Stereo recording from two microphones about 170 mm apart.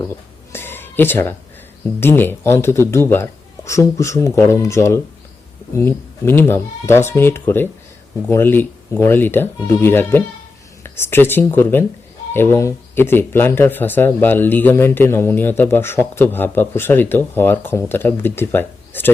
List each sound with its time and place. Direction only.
0.5 s music: 15° left (ahead or behind)
2.0 s speech: 10° left (ahead or behind)